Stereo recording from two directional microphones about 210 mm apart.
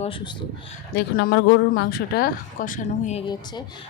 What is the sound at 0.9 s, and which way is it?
Speech, 45° left (ahead or behind).